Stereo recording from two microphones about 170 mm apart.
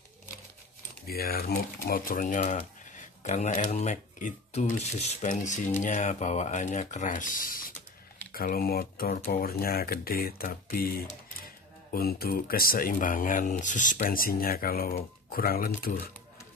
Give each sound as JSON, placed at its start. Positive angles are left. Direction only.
{"t": 1.0, "sound": "speech", "side_deg": 65}